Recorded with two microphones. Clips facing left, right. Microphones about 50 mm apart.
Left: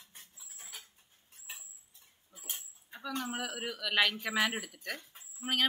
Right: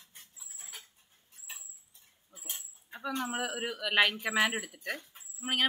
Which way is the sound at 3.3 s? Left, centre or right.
Centre.